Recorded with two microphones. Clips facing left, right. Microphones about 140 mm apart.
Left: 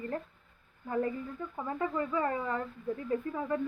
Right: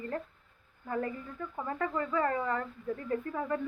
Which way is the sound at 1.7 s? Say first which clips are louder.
Even; 15° left (ahead or behind).